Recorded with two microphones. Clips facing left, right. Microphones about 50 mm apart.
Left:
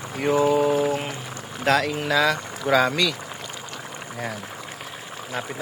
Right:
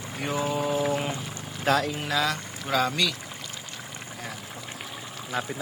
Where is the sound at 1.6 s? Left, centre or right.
Left.